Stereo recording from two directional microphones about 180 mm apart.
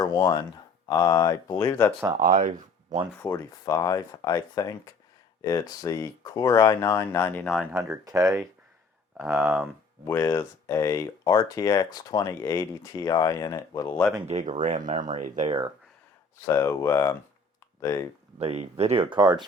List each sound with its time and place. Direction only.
0.0 s speech: 20° left (ahead or behind)
2.1 s speech: 50° right (ahead or behind)
3.2 s speech: 20° left (ahead or behind); by 7.7 s centre (ahead or behind)
7.7 s speech: 15° right (ahead or behind)
10.1 s speech: 15° left (ahead or behind)
14.6 s speech: 45° right (ahead or behind)
16.5 s speech: 15° left (ahead or behind)
18.3 s speech: 35° right (ahead or behind)